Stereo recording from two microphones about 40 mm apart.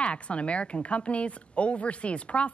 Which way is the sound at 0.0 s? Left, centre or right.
Left.